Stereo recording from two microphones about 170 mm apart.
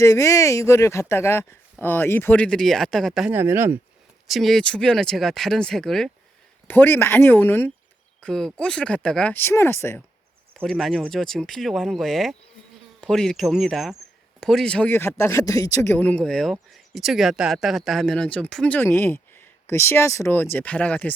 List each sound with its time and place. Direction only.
0.0 s speech: 15° left (ahead or behind); by 3.3 s centre (ahead or behind)
3.3 s speech: 15° right (ahead or behind)
4.3 s speech: centre (ahead or behind)
8.2 s speech: 5° left (ahead or behind)
10.5 s speech: 5° left (ahead or behind)